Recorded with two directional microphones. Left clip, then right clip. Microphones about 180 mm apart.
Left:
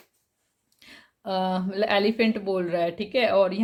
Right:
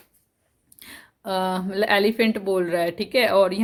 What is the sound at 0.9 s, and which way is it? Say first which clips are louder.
A woman's voice: right 2 dB; 25° right (ahead or behind).